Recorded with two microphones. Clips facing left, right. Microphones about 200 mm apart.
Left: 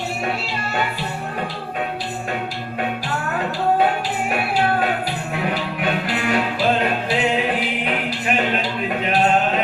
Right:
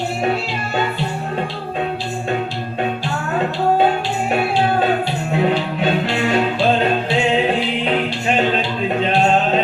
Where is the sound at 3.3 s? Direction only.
25° right (ahead or behind).